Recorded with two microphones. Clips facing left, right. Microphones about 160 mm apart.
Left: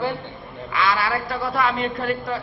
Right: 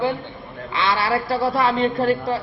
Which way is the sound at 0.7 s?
30° right (ahead or behind).